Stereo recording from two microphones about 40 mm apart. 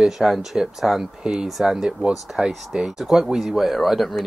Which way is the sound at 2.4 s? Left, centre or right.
Right.